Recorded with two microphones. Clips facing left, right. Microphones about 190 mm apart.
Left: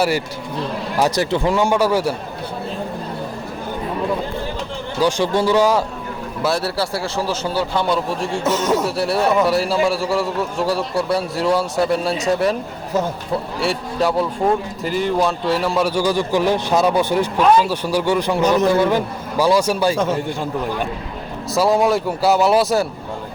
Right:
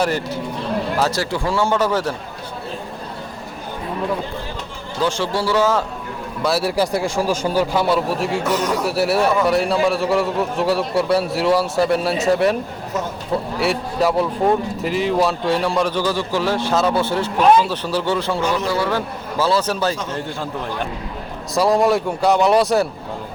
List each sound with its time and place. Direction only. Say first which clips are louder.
0.9 s a man's voice: left 7 dB; 15° left (ahead or behind)
4.9 s a man's voice: left 3 dB; 15° left (ahead or behind)
6.6 s a man's voice: right 3 dB; 15° right (ahead or behind)
8.4 s speech: left 5 dB; 25° left (ahead or behind)
9.0 s a man's voice: right 4 dB; centre (ahead or behind)
13.6 s a man's voice: right 1 dB; centre (ahead or behind); by 18.4 s 15° left (ahead or behind)
18.4 s a man's voice: left 9 dB; 45° left (ahead or behind)
18.7 s a man's voice: left 4 dB; 20° left (ahead or behind)
21.5 s a man's voice: even; centre (ahead or behind)